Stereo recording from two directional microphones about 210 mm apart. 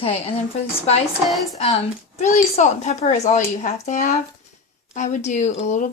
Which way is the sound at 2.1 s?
35° left (ahead or behind).